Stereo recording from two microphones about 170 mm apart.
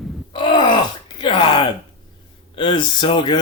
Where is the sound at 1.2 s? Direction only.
30° left (ahead or behind).